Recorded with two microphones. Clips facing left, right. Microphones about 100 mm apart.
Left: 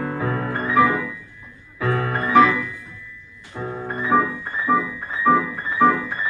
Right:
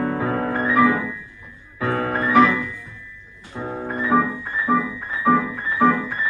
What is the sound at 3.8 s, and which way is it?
Music, centre (ahead or behind).